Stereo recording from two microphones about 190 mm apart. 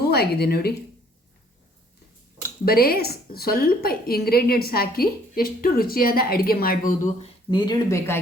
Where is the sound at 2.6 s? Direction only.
50° left (ahead or behind).